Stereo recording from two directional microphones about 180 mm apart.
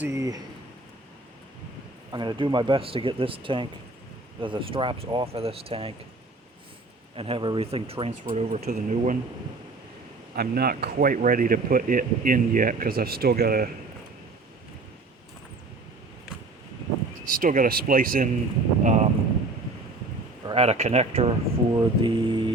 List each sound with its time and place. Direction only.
0.0 s speech: 15° right (ahead or behind)
2.1 s speech: 25° right (ahead or behind)
7.2 s speech: 30° right (ahead or behind); by 9.1 s 45° right (ahead or behind)
10.3 s speech: 60° right (ahead or behind)
17.2 s speech: 50° right (ahead or behind)
20.5 s speech: 35° right (ahead or behind)
21.7 s speech: 25° right (ahead or behind)